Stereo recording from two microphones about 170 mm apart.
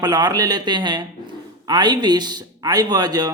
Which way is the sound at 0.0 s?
25° right (ahead or behind).